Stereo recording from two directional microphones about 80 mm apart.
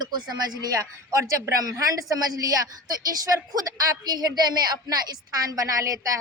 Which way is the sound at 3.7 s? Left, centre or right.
Right.